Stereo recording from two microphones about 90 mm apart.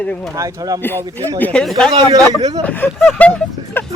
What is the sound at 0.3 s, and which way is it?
Speech, 40° right (ahead or behind).